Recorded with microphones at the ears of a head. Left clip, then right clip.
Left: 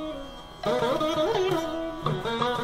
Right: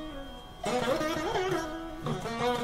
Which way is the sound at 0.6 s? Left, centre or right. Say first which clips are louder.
Left 4 dB; left.